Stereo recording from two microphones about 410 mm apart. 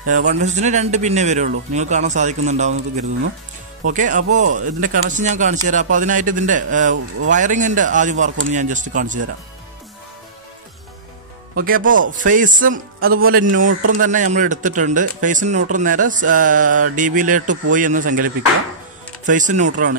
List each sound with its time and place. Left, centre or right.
0.2 s a man's voice: centre
11.5 s a man's voice: right